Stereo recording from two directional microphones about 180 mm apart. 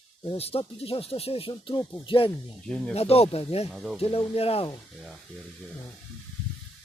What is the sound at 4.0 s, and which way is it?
Speech, 35° left (ahead or behind).